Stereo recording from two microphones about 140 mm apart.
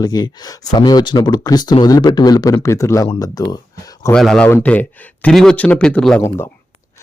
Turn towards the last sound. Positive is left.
turn(degrees=15)  # may be behind; listen again after turning